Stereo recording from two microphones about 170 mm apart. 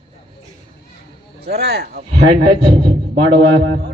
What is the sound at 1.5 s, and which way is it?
Speech, 70° right (ahead or behind).